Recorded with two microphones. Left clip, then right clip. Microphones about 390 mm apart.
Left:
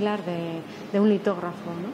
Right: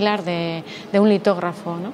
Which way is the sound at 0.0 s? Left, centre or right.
Centre.